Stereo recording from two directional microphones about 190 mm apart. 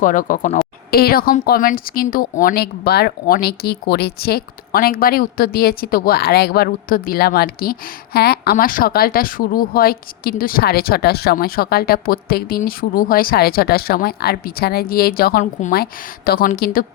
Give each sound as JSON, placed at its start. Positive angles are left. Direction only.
{"t": 0.0, "sound": "speech", "side_deg": 45}